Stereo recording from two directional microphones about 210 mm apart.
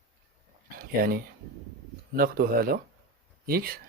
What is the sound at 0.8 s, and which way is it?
Speech, 45° right (ahead or behind).